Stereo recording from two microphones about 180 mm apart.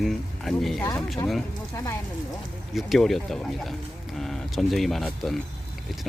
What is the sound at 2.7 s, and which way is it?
Speech, centre (ahead or behind).